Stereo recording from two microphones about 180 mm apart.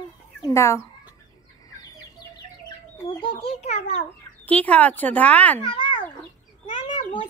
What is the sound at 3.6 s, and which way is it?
Speech, 35° left (ahead or behind).